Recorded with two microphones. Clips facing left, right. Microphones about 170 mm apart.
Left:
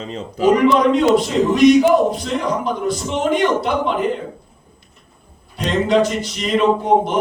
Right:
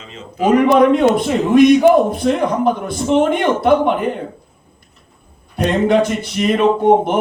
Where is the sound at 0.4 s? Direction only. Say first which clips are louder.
Right 2 dB; 55° right (ahead or behind).